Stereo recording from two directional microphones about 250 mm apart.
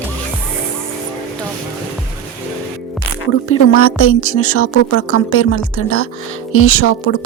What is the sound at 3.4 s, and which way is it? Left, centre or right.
Speech, left.